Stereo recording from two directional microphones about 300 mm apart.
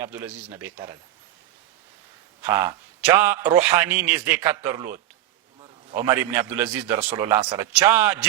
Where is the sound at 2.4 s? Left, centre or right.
Centre.